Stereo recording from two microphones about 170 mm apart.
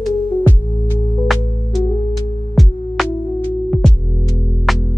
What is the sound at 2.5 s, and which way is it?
Music, centre (ahead or behind).